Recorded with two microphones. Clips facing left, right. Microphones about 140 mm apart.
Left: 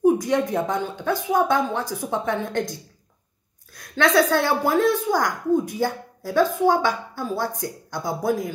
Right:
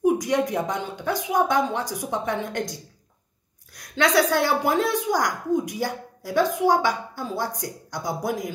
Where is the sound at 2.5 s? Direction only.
50° left (ahead or behind).